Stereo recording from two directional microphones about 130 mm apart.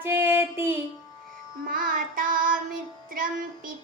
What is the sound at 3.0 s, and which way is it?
Music, 90° right.